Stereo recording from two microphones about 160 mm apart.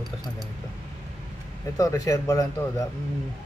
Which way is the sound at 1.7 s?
20° left (ahead or behind).